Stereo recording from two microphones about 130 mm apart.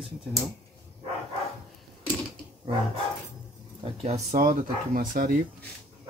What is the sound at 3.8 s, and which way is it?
Speech, 55° right (ahead or behind).